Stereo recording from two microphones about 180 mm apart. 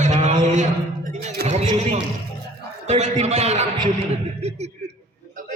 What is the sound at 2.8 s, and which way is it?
A man's voice, 40° right (ahead or behind).